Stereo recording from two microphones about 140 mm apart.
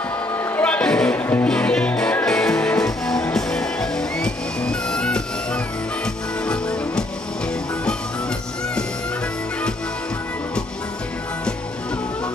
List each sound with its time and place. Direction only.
0.6 s music: 10° left (ahead or behind)